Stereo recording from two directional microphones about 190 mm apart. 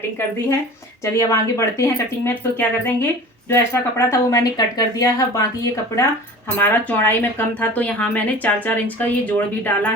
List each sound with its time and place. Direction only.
1.0 s speech: 15° left (ahead or behind)